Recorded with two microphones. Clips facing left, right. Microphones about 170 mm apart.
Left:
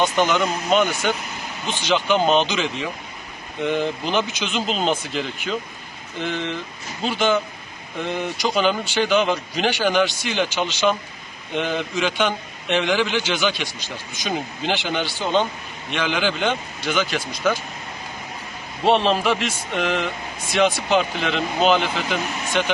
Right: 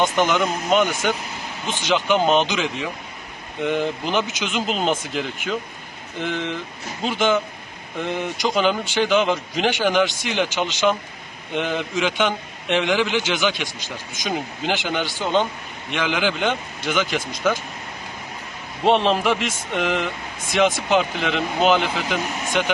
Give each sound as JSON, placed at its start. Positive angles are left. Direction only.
{"t": 0.0, "sound": "a man's voice", "side_deg": -15}
{"t": 7.0, "sound": "a man's voice", "side_deg": -15}
{"t": 18.9, "sound": "a man's voice", "side_deg": -15}